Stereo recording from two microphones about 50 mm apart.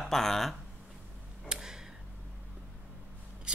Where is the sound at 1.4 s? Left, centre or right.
Centre.